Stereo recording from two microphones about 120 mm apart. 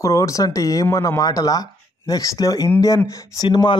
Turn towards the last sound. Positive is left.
turn(degrees=35)  # may be behind; listen again after turning